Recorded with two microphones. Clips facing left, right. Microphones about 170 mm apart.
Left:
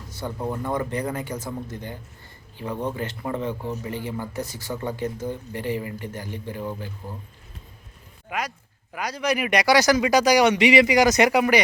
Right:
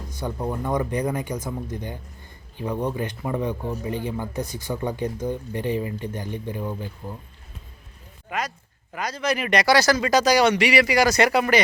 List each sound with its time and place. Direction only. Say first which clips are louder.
0.1 s a sound: right 1 dB; 15° right (ahead or behind)
0.3 s a man's voice: right 1 dB; 10° right (ahead or behind)
8.3 s speech: right 1 dB; 10° left (ahead or behind)